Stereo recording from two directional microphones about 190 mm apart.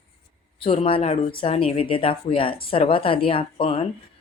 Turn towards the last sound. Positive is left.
turn(degrees=30)  # may be behind; listen again after turning